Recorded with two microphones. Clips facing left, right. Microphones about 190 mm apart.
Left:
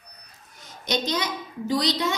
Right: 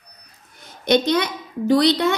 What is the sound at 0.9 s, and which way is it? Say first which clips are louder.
A woman's voice: right 9 dB; 60° right (ahead or behind).